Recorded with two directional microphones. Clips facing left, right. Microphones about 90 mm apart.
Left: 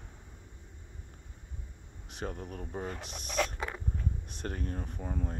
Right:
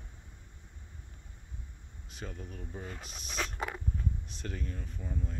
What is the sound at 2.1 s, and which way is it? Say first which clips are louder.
Speech: left 5 dB; 60° left (ahead or behind).